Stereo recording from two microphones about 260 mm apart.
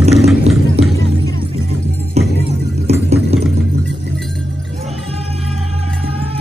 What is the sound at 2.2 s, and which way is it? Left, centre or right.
Music, right.